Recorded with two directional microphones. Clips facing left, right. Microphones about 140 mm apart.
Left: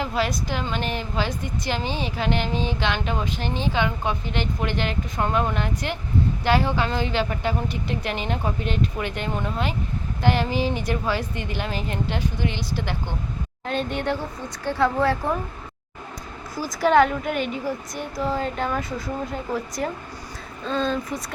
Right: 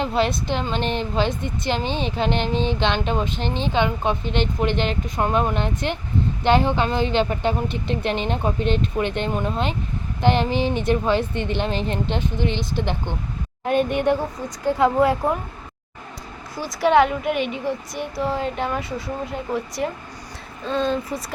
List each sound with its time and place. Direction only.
0.0 s a woman's voice: 25° right (ahead or behind)
16.6 s speech: centre (ahead or behind)